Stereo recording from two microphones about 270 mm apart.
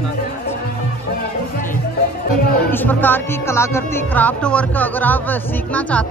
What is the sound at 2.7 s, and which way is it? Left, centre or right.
Speech, centre.